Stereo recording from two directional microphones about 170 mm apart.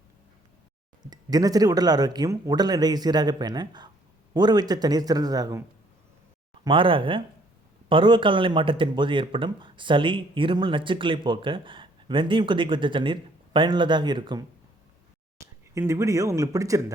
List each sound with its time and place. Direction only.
1.0 s speech: 25° right (ahead or behind)
6.7 s speech: 30° right (ahead or behind)